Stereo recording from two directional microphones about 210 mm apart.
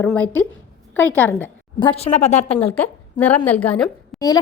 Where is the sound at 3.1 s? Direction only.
10° left (ahead or behind).